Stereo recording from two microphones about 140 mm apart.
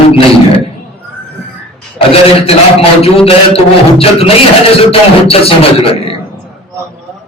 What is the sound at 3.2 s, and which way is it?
A man's voice, 45° left (ahead or behind).